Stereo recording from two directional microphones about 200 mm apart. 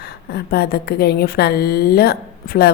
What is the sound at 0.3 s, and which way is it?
A woman's voice, 50° left (ahead or behind).